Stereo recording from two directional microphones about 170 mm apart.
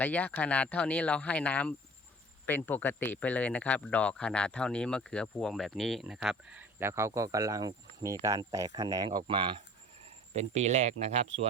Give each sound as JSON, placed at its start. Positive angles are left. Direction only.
{"t": 0.0, "sound": "speech", "side_deg": 10}